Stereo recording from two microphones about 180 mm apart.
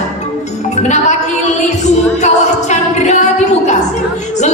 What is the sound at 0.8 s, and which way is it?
Speech, 40° left (ahead or behind).